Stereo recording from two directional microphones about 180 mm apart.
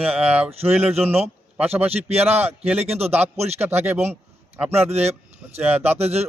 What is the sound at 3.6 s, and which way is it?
Speech, 10° right (ahead or behind).